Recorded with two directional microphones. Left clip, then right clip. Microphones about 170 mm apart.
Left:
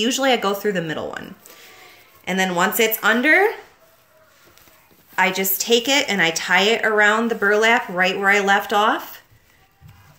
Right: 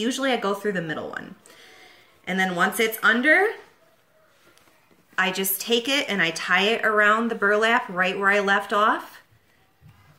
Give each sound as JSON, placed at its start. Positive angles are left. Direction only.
{"t": 0.0, "sound": "a woman's voice", "side_deg": -25}
{"t": 5.1, "sound": "a woman's voice", "side_deg": -30}